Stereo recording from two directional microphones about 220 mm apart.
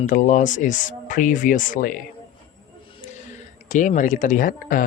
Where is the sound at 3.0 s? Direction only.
35° left (ahead or behind).